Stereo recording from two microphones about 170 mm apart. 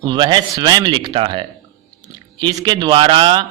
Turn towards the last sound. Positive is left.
turn(degrees=-30)  # may be behind; listen again after turning